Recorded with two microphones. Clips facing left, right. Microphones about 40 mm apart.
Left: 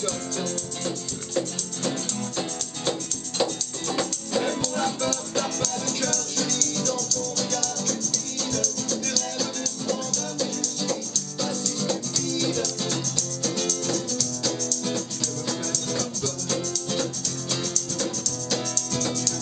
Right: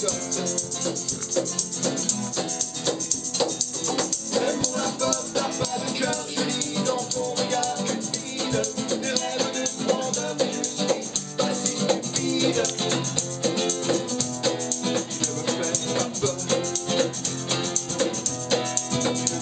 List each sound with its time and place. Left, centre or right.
0.4 s music: centre
3.9 s music: centre
5.9 s music: centre; by 19.3 s right